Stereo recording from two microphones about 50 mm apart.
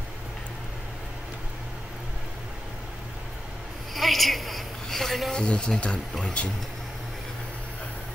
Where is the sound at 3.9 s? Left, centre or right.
Centre.